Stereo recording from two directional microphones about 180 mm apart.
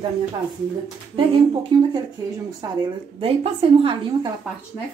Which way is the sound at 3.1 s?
30° right (ahead or behind).